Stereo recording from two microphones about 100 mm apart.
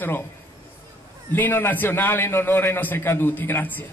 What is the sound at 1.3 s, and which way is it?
A man's voice, 20° left (ahead or behind).